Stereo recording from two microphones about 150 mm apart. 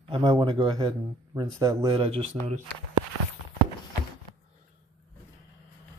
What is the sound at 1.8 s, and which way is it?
Speech, 40° right (ahead or behind).